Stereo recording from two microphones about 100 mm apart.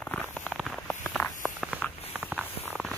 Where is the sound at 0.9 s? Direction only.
15° left (ahead or behind).